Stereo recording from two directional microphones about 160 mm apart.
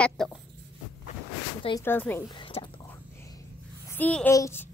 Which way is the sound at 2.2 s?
30° left (ahead or behind).